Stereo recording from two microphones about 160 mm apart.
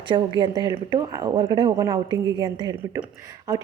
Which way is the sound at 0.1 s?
25° right (ahead or behind).